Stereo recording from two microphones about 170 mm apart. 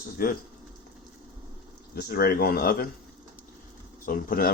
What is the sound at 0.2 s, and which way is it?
Speech, 55° left (ahead or behind).